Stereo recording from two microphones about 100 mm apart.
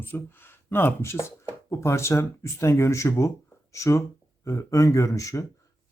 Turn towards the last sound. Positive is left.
turn(degrees=35)  # may be behind; listen again after turning